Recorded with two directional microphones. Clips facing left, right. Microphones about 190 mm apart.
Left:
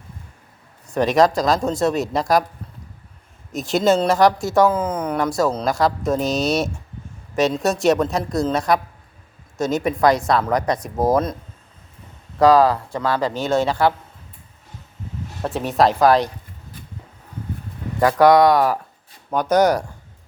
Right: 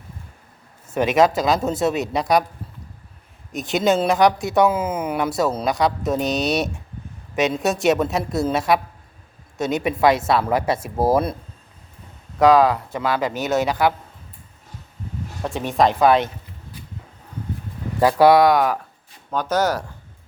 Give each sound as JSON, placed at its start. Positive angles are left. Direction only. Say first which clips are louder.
{"t": 0.9, "sound": "speech", "louder": "left 1 dB", "side_deg": -5}
{"t": 3.5, "sound": "speech", "louder": "left 2 dB", "side_deg": 0}
{"t": 12.4, "sound": "speech", "louder": "left 1 dB", "side_deg": 0}
{"t": 13.1, "sound": "speech", "louder": "left 1 dB", "side_deg": -20}
{"t": 15.4, "sound": "speech", "louder": "left 1 dB", "side_deg": 0}
{"t": 18.0, "sound": "speech", "louder": "even", "side_deg": -10}
{"t": 19.3, "sound": "speech", "louder": "left 4 dB", "side_deg": 10}